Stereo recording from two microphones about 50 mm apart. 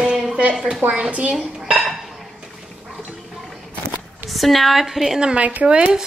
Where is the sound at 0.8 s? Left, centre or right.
Right.